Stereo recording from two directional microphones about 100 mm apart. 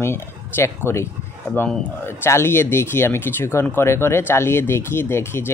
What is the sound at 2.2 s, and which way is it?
Speech, 25° left (ahead or behind).